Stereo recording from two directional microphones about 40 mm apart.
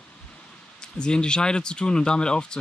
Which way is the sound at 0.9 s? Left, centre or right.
Left.